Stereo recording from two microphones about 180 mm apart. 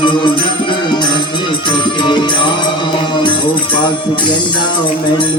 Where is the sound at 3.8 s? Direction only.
25° left (ahead or behind).